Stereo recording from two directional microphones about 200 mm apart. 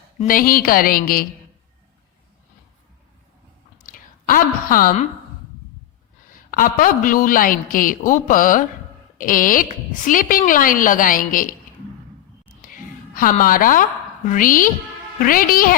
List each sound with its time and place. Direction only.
0.2 s a woman's voice: 45° left (ahead or behind)
3.8 s speech: 45° left (ahead or behind)
6.5 s a woman's voice: 45° left (ahead or behind)
12.6 s a sound: 45° left (ahead or behind)
13.4 s a woman's voice: 45° left (ahead or behind)